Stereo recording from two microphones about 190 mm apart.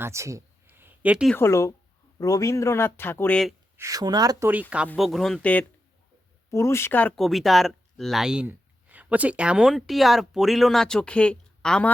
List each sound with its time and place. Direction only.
0.0 s a sound: 15° right (ahead or behind)
1.4 s speech: 15° left (ahead or behind)
3.8 s speech: 15° right (ahead or behind)
4.9 s speech: centre (ahead or behind)